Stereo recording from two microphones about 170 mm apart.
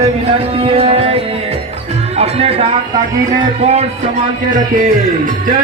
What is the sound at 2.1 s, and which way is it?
Music, 35° right (ahead or behind).